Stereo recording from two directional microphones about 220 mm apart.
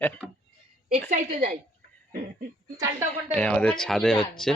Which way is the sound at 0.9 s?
35° right (ahead or behind).